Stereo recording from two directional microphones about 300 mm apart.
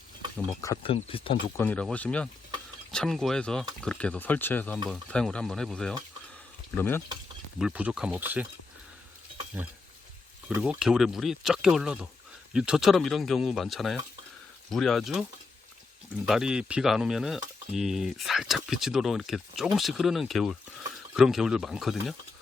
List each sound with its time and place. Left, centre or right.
0.3 s speech: centre
1.6 s speech: centre
7.6 s speech: centre
9.6 s speech: centre
16.2 s speech: centre